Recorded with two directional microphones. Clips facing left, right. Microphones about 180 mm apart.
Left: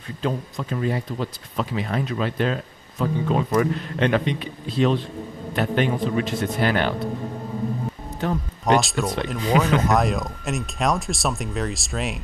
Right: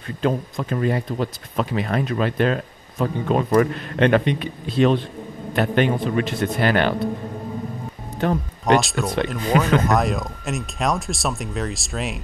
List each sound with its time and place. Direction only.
0.2 s speech: 55° right (ahead or behind)
8.2 s speech: 60° right (ahead or behind)
8.6 s speech: centre (ahead or behind)